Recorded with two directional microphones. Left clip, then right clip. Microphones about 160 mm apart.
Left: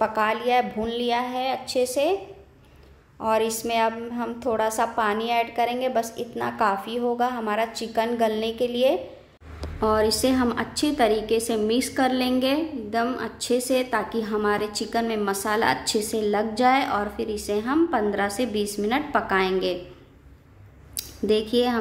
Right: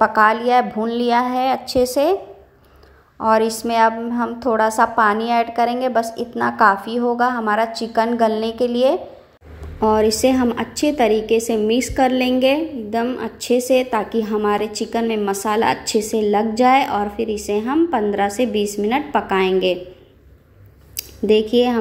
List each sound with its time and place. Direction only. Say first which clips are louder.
0.0 s a woman's voice: right 8 dB; 15° right (ahead or behind)
3.2 s a woman's voice: right 7 dB; 15° right (ahead or behind)
14.6 s a woman's voice: right 5 dB; 30° left (ahead or behind)
14.9 s a woman's voice: right 4 dB; 10° right (ahead or behind)
20.9 s speech: right 7 dB; 15° right (ahead or behind)